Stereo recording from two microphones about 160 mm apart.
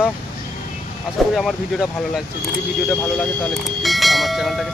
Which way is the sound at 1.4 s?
Centre (ahead or behind).